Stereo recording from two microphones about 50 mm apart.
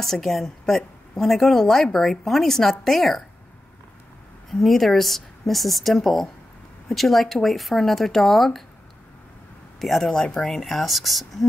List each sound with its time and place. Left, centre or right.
0.0 s a woman's voice: centre
4.5 s a woman's voice: centre
9.8 s a woman's voice: centre
10.2 s speech: centre
10.5 s a woman's voice: centre